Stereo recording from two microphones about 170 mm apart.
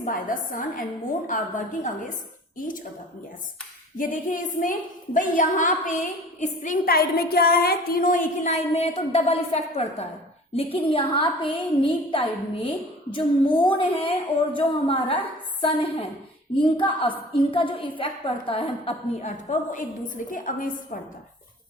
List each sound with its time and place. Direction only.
0.0 s a woman's voice: 50° left (ahead or behind)
3.9 s a woman's voice: 50° left (ahead or behind)